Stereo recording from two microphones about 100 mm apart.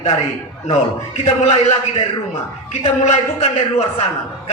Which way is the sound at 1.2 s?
90° left.